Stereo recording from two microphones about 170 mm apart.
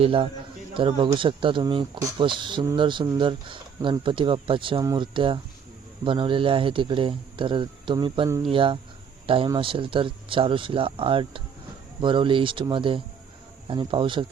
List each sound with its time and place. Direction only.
0.0 s speech: 30° right (ahead or behind)